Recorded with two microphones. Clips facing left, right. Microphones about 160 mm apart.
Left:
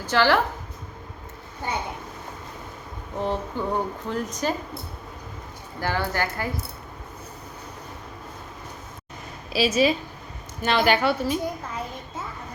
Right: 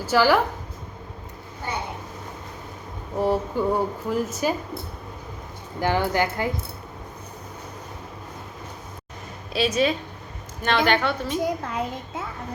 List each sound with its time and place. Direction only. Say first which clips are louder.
0.0 s a woman's voice: right 2 dB; 10° right (ahead or behind)
3.2 s a woman's voice: right 5 dB; 10° right (ahead or behind)
5.8 s a woman's voice: right 4 dB; 15° right (ahead or behind)
9.5 s a woman's voice: left 1 dB; 5° left (ahead or behind)
11.6 s a child's voice: right 5 dB; 70° right (ahead or behind)